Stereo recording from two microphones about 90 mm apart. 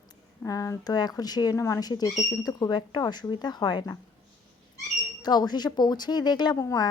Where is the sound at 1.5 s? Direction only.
30° left (ahead or behind).